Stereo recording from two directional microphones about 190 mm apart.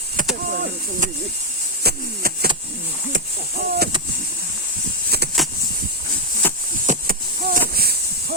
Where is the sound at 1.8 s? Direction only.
55° right (ahead or behind).